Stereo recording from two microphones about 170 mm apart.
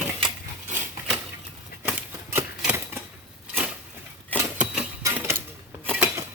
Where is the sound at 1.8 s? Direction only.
10° right (ahead or behind).